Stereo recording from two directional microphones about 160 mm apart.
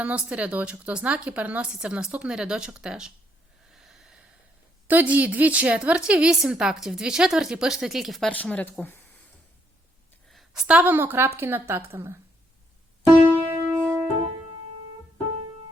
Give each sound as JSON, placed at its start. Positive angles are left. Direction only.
{"t": 0.0, "sound": "a woman's voice", "side_deg": -10}
{"t": 3.7, "sound": "snort", "side_deg": -5}
{"t": 4.9, "sound": "a woman's voice", "side_deg": -10}
{"t": 10.2, "sound": "a woman's voice", "side_deg": 0}
{"t": 13.2, "sound": "music", "side_deg": -10}